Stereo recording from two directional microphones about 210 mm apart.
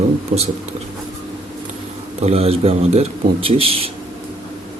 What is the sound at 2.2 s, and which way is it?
A man's voice, 30° right (ahead or behind).